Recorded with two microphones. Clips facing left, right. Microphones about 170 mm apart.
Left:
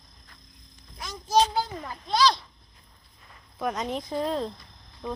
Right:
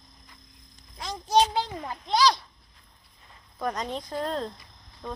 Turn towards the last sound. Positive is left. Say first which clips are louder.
# left 3 dB
turn(degrees=5)  # may be behind; listen again after turning